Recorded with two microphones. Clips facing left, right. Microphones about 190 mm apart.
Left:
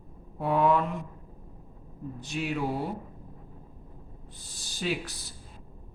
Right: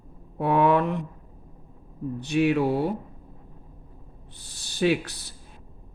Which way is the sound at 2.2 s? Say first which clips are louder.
Right 9 dB; 65° right (ahead or behind).